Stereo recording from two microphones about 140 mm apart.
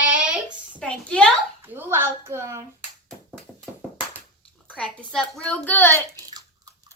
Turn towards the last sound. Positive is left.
turn(degrees=-25)  # may be behind; listen again after turning